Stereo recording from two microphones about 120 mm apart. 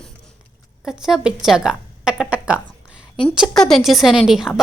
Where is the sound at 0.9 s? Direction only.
5° right (ahead or behind).